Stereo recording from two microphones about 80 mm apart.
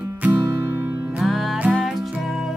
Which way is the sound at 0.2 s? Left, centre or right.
Right.